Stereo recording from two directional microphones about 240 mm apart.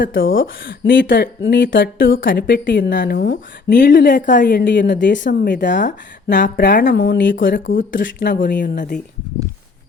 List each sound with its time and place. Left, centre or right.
0.7 s a woman's voice: left
5.8 s speech: left
6.9 s a woman's voice: left
7.3 s speech: left
7.9 s speech: left